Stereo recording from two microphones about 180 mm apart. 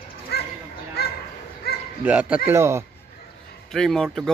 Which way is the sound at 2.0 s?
10° right (ahead or behind).